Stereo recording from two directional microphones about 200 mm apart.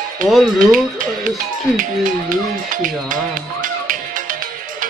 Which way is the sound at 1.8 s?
40° right (ahead or behind).